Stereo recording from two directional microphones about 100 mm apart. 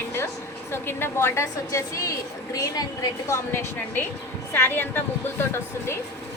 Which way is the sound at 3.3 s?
25° left (ahead or behind).